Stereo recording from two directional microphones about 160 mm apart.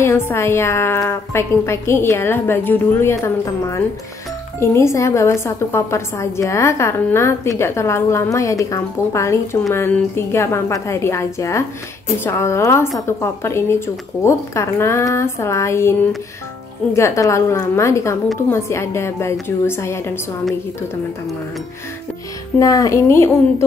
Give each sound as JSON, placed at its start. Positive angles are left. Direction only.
{"t": 0.0, "sound": "a woman's voice", "side_deg": 15}
{"t": 4.6, "sound": "a woman's voice", "side_deg": 15}
{"t": 16.9, "sound": "a woman's voice", "side_deg": 20}
{"t": 22.6, "sound": "a woman's voice", "side_deg": 20}